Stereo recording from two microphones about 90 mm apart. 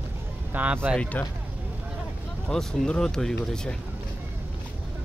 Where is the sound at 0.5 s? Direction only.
15° right (ahead or behind).